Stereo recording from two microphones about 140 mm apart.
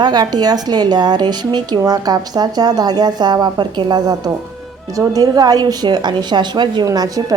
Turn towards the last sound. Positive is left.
turn(degrees=-25)  # may be behind; listen again after turning